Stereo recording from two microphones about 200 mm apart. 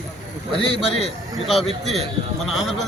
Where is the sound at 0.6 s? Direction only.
30° left (ahead or behind).